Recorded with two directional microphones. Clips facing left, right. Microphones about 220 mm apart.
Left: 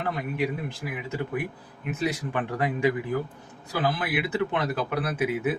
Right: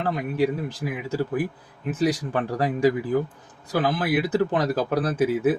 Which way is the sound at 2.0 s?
35° right (ahead or behind).